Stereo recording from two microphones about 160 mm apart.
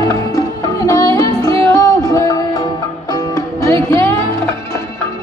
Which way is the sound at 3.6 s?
15° left (ahead or behind).